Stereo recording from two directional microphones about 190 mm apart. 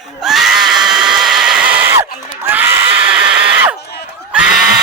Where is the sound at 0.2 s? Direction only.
Centre (ahead or behind).